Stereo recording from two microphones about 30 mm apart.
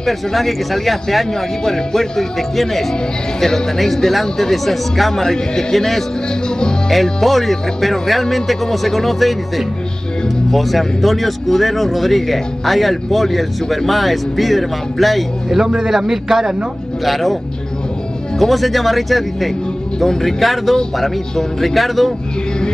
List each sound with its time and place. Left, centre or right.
0.0 s speech: centre
1.6 s speech: centre
5.2 s speech: centre
15.9 s speech: centre
17.0 s speech: centre
18.4 s speech: centre